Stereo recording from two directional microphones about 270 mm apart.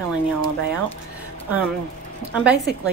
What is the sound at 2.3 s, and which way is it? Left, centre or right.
Speech, centre.